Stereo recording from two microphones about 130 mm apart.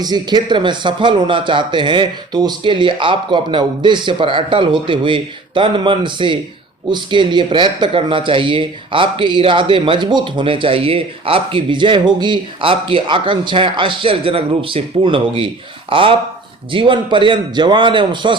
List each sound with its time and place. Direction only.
0.0 s speech: 30° right (ahead or behind)